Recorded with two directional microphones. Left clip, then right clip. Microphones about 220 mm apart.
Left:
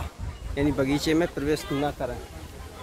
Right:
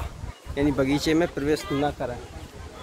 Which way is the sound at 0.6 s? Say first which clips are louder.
Right 2 dB; 10° right (ahead or behind).